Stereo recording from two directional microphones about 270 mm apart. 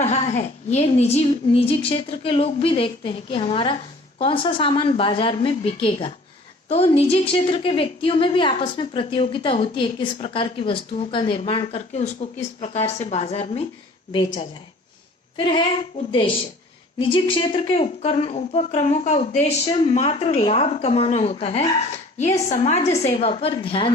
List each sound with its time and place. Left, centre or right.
0.0 s a woman's voice: left
15.4 s a woman's voice: centre